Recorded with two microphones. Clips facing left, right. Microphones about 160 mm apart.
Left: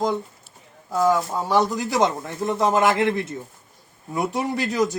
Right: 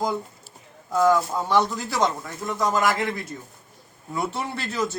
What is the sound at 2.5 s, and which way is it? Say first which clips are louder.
Speech: left 3 dB; 25° left (ahead or behind).